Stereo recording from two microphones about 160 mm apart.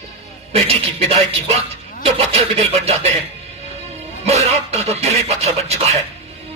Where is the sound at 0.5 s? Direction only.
40° right (ahead or behind).